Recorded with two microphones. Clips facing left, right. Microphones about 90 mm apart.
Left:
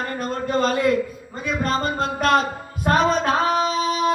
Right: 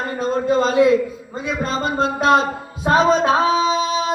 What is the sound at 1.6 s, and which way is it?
Music, 55° left (ahead or behind).